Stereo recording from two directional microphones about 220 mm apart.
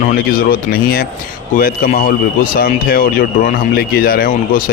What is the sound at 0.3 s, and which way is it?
A man's voice, 45° left (ahead or behind).